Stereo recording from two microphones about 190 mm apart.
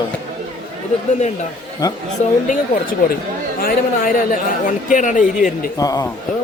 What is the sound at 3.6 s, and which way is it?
A man's voice, 45° left (ahead or behind).